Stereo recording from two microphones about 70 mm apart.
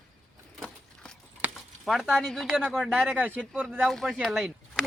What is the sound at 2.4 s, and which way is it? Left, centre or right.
Speech, centre.